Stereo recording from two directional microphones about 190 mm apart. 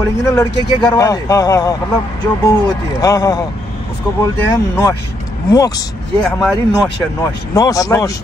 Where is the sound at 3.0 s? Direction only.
20° left (ahead or behind).